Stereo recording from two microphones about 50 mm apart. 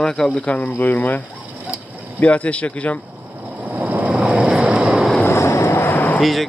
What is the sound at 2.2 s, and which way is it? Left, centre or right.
Speech, left.